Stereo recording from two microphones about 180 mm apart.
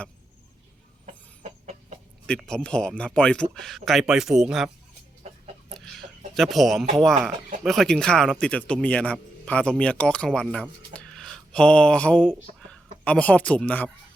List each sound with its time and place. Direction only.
1.0 s chicken: 40° right (ahead or behind)
2.2 s a man's voice: 5° left (ahead or behind)
5.7 s a sound: centre (ahead or behind)
6.9 s a man's voice: centre (ahead or behind)